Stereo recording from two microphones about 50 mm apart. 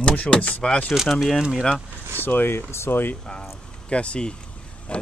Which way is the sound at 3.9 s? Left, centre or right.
Left.